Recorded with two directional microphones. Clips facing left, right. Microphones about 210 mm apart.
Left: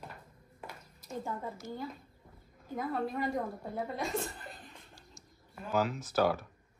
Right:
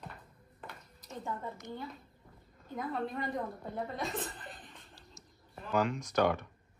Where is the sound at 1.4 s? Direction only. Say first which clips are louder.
Left 2 dB; 5° left (ahead or behind).